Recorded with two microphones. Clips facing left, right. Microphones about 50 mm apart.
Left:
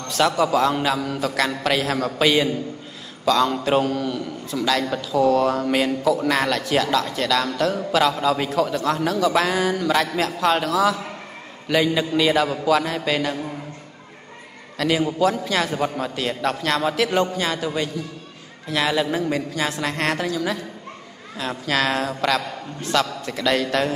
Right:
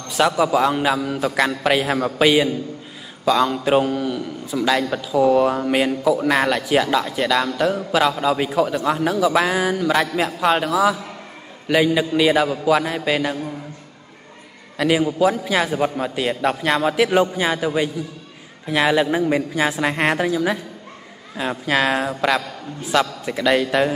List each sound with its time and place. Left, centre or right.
0.1 s a man's voice: centre
14.8 s a man's voice: centre